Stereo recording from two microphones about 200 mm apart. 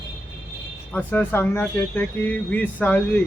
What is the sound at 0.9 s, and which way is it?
Speech, 10° left (ahead or behind).